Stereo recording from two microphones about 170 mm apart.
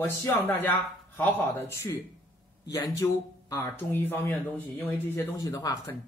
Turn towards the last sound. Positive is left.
turn(degrees=20)  # may be behind; listen again after turning